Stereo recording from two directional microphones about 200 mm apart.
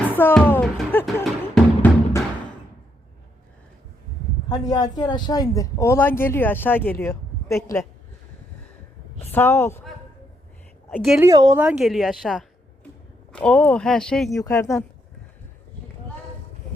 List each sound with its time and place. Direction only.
0.1 s music: 10° left (ahead or behind)
4.4 s speech: 20° left (ahead or behind)
9.3 s speech: 10° left (ahead or behind)
10.9 s speech: centre (ahead or behind)
11.2 s speech: 15° right (ahead or behind)
11.6 s speech: 5° right (ahead or behind)
14.3 s speech: 15° left (ahead or behind)